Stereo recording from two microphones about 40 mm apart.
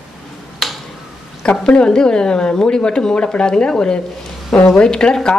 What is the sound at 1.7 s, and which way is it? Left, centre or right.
A woman's voice, centre.